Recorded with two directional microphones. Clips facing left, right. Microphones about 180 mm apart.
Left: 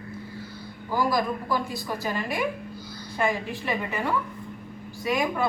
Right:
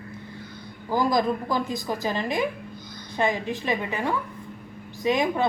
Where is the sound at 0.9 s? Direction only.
20° right (ahead or behind).